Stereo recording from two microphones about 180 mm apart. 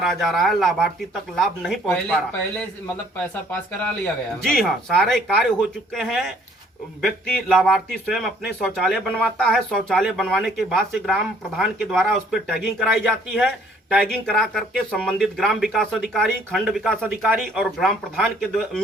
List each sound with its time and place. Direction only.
0.0 s speech: centre (ahead or behind)
3.5 s speech: 5° left (ahead or behind)